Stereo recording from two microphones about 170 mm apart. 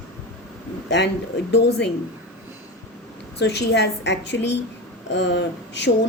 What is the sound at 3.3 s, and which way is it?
A woman's voice, 80° left.